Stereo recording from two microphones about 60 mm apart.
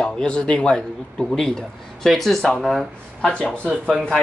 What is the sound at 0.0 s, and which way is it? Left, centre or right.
Speech, centre.